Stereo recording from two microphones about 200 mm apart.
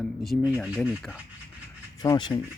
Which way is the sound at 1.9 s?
20° left (ahead or behind).